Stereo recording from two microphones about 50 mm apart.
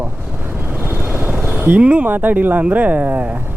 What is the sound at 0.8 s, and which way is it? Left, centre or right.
Vehicle, right.